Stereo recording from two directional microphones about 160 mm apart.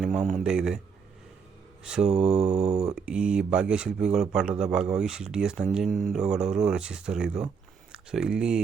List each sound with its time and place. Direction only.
0.0 s speech: centre (ahead or behind)
1.8 s speech: 5° right (ahead or behind)
2.6 s speech: 45° right (ahead or behind)
2.9 s speech: 5° right (ahead or behind)